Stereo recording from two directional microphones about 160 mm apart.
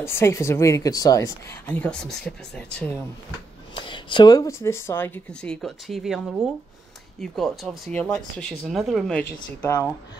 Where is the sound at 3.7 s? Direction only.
30° left (ahead or behind); by 9.2 s centre (ahead or behind).